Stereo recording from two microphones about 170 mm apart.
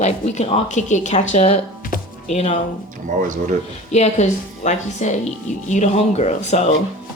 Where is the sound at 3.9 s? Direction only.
40° left (ahead or behind).